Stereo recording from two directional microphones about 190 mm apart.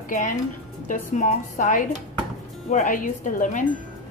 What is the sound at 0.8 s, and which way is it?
A woman's voice, 40° left (ahead or behind).